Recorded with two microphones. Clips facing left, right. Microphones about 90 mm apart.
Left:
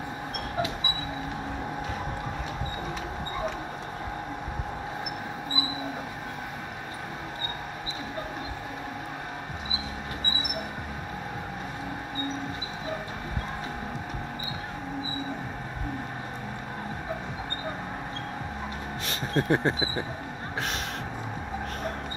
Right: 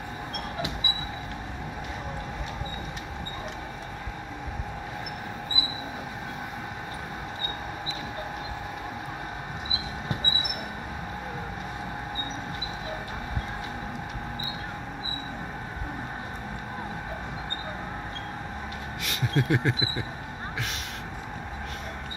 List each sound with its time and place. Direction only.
19.0 s speech: 35° left (ahead or behind)